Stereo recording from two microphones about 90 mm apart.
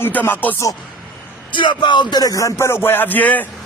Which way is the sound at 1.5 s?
60° left (ahead or behind).